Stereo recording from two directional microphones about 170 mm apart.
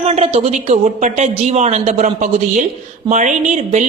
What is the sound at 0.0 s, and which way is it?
Speech, 40° right (ahead or behind).